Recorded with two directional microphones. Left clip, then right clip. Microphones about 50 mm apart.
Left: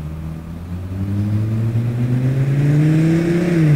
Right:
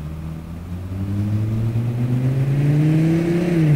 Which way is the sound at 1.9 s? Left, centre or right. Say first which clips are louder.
Left 2 dB; left.